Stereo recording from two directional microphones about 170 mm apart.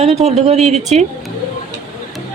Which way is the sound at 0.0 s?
40° right (ahead or behind).